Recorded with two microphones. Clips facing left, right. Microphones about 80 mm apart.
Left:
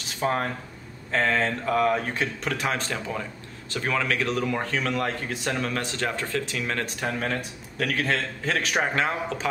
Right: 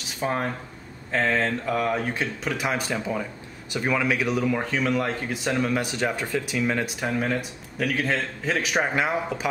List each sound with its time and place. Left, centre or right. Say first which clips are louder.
0.2 s speech: left 1 dB; centre